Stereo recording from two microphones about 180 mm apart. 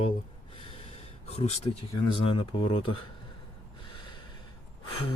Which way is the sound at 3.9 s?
25° left (ahead or behind).